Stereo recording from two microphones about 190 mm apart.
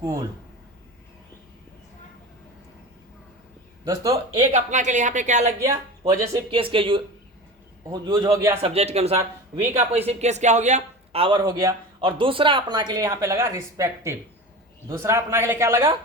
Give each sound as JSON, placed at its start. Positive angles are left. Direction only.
{"t": 0.0, "sound": "a man's voice", "side_deg": -20}
{"t": 3.8, "sound": "speech", "side_deg": -20}
{"t": 4.5, "sound": "speech", "side_deg": -40}
{"t": 5.5, "sound": "a man's voice", "side_deg": -15}
{"t": 6.5, "sound": "speech", "side_deg": -30}
{"t": 8.6, "sound": "a man's voice", "side_deg": -35}